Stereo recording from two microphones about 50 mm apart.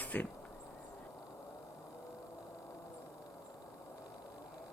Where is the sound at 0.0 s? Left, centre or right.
Left.